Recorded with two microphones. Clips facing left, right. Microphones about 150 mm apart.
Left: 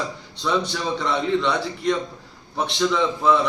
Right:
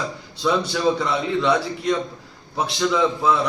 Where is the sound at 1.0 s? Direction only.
5° right (ahead or behind).